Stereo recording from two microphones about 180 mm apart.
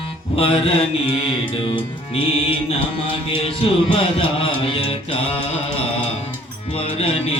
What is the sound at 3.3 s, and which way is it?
Music, 30° left (ahead or behind).